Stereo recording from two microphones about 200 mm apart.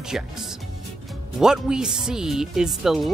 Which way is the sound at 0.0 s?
Centre (ahead or behind).